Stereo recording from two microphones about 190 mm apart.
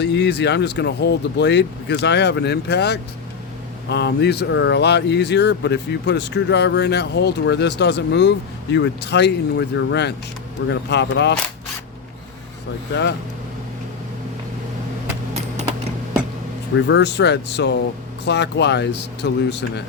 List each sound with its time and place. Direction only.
0.0 s speech: 65° left (ahead or behind)
12.9 s speech: 65° left (ahead or behind)
16.7 s speech: 70° left (ahead or behind)